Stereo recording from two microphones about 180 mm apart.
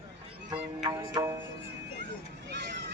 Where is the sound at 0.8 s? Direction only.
25° right (ahead or behind).